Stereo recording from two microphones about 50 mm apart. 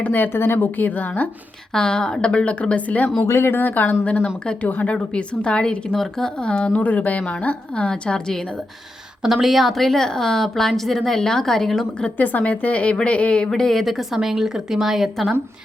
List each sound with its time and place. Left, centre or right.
0.0 s speech: left
0.8 s speech: left
1.7 s a woman's voice: centre
3.2 s speech: left
3.5 s a woman's voice: left
5.1 s a woman's voice: left
9.2 s a woman's voice: centre
12.1 s a woman's voice: left
13.5 s speech: centre